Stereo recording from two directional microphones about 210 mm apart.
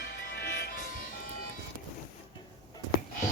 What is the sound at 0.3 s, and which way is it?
Music, 50° left (ahead or behind).